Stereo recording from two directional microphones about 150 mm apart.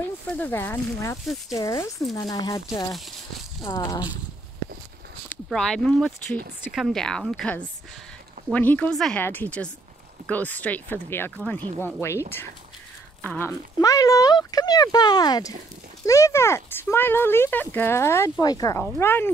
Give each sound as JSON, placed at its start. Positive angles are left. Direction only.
{"t": 0.0, "sound": "speech", "side_deg": 10}
{"t": 5.3, "sound": "a sound", "side_deg": 5}
{"t": 5.9, "sound": "speech", "side_deg": 5}
{"t": 13.2, "sound": "speech", "side_deg": 10}
{"t": 13.7, "sound": "speech", "side_deg": 25}